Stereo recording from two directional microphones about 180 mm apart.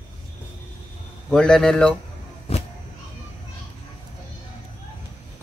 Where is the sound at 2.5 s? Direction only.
35° left (ahead or behind).